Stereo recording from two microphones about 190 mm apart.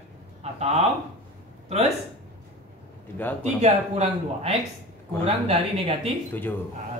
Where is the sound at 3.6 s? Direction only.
35° right (ahead or behind).